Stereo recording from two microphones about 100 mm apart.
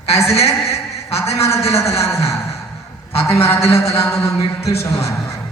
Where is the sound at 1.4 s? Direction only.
30° left (ahead or behind).